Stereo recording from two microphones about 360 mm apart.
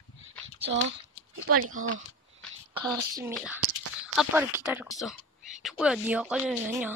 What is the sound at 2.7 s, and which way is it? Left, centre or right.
Speech, centre.